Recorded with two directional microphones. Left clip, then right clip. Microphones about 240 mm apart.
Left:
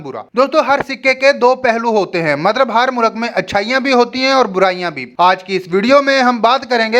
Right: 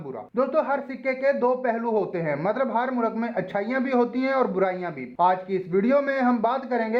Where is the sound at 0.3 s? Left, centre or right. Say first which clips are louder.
Left 11 dB; left.